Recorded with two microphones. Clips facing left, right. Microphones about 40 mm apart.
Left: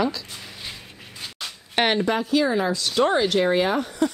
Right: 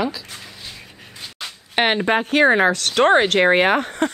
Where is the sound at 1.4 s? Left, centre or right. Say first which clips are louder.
Right 3 dB; centre.